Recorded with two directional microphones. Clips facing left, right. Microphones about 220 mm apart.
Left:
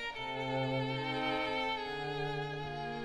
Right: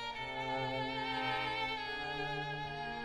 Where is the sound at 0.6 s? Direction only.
55° left (ahead or behind).